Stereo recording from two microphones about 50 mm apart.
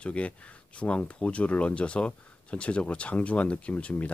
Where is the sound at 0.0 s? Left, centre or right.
Left.